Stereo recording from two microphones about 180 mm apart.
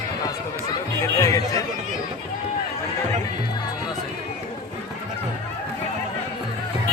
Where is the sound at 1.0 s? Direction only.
20° left (ahead or behind).